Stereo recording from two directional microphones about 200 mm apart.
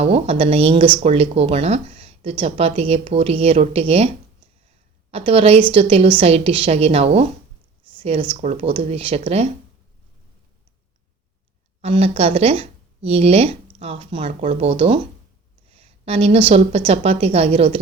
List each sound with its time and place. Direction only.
0.0 s speech: 30° right (ahead or behind)
5.1 s speech: 30° right (ahead or behind)
11.8 s speech: 30° right (ahead or behind)